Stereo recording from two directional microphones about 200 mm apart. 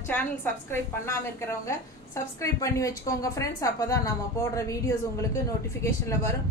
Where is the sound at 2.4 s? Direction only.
15° left (ahead or behind).